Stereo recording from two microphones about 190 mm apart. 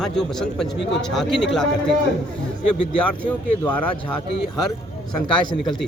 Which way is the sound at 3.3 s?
5° left (ahead or behind).